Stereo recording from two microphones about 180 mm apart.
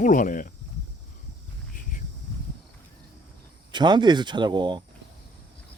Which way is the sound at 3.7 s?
25° right (ahead or behind).